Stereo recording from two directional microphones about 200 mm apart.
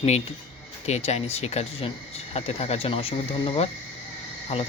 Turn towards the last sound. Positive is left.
turn(degrees=30)  # may be behind; listen again after turning